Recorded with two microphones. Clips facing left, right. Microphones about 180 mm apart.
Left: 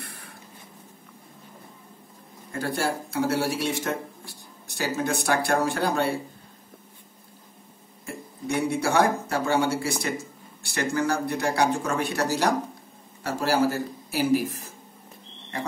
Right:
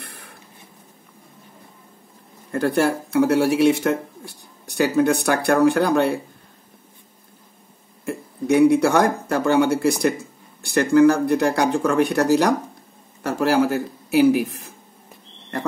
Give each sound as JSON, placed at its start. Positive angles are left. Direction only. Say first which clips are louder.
{"t": 0.0, "sound": "a sound", "louder": "right 1 dB", "side_deg": -65}
{"t": 2.5, "sound": "speech", "louder": "right 8 dB", "side_deg": -60}
{"t": 8.0, "sound": "speech", "louder": "right 8 dB", "side_deg": -60}
{"t": 13.2, "sound": "speech", "louder": "right 5 dB", "side_deg": -60}